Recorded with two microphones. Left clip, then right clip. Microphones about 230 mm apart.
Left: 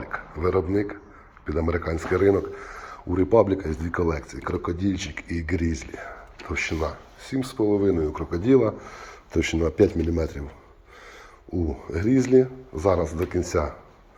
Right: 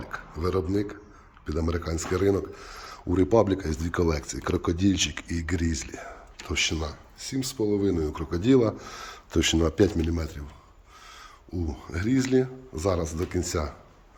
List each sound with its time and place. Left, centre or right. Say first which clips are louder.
0.0 s speech: left 5 dB; right
3.2 s speech: left 3 dB; right
5.3 s speech: left 3 dB; centre
5.8 s speech: left 2 dB; right
6.8 s speech: left 6 dB; centre
8.6 s speech: left 2 dB; right
9.7 s speech: left 3 dB; centre
10.2 s speech: left 8 dB; centre
11.5 s speech: left 6 dB; centre
11.9 s speech: left 5 dB; right